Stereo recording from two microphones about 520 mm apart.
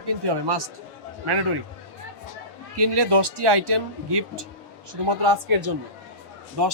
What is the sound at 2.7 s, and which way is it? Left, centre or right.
A man's voice, right.